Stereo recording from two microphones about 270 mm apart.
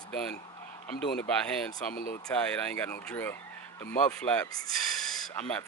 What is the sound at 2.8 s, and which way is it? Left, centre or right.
Speech, centre.